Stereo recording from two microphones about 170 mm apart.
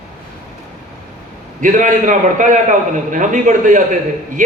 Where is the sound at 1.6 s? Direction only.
50° right (ahead or behind).